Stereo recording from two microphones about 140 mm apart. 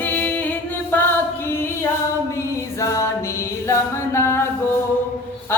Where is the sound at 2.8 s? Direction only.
25° left (ahead or behind).